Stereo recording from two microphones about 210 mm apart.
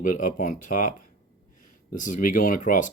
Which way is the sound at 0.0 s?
40° left (ahead or behind).